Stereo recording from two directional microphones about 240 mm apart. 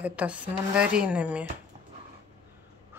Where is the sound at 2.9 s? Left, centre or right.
Centre.